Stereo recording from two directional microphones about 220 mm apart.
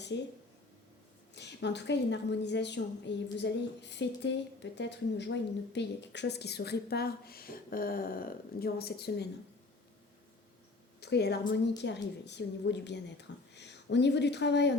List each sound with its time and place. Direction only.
0.1 s a woman's voice: 55° left (ahead or behind)
1.4 s a woman's voice: 50° left (ahead or behind)
11.0 s a woman's voice: 50° left (ahead or behind)